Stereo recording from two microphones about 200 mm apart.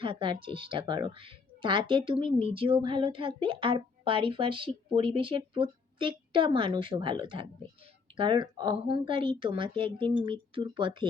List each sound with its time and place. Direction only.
0.0 s a woman's voice: 25° right (ahead or behind)